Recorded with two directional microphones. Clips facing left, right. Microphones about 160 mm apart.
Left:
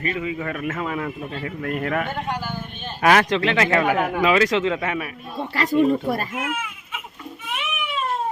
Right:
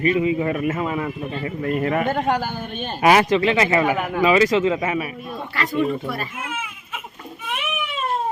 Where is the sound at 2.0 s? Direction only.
45° right (ahead or behind).